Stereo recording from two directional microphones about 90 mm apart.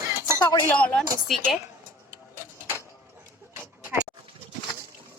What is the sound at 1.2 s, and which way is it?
Speech, centre (ahead or behind).